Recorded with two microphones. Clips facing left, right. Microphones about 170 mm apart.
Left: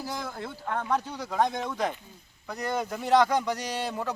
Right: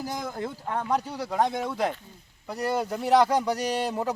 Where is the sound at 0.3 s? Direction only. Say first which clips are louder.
Right 2 dB; 40° right (ahead or behind).